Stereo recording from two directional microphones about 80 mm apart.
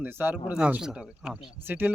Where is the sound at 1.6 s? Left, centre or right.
Right.